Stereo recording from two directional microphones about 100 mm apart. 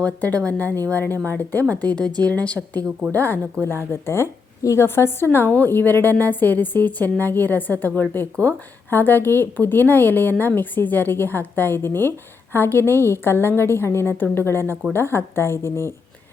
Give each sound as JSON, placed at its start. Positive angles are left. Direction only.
{"t": 0.0, "sound": "a woman's voice", "side_deg": 15}